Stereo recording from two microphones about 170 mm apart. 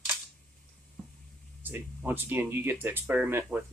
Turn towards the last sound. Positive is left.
turn(degrees=-15)  # may be behind; listen again after turning